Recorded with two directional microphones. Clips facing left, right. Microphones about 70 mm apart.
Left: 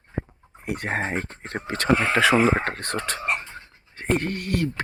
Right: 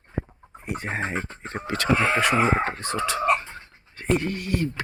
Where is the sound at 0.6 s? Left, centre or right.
Left.